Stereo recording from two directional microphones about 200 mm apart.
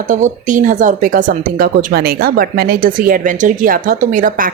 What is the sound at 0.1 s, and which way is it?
Speech, 40° right (ahead or behind).